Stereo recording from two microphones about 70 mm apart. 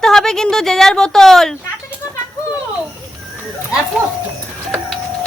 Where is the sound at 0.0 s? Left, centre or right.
Centre.